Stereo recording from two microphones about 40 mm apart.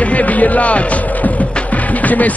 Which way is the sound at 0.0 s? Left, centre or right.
Left.